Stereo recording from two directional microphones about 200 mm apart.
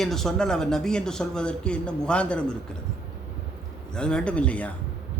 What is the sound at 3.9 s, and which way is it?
Speech, 5° left (ahead or behind).